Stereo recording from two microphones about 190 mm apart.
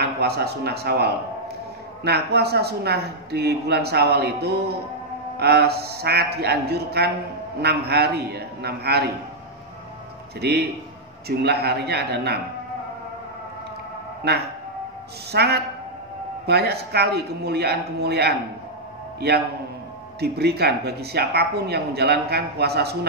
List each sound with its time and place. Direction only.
0.0 s a man's voice: 60° right (ahead or behind)
10.4 s speech: 60° right (ahead or behind)
14.2 s speech: 60° right (ahead or behind)
20.2 s speech: 60° right (ahead or behind)